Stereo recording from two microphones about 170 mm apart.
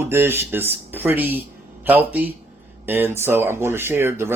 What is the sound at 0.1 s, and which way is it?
Speech, 15° right (ahead or behind).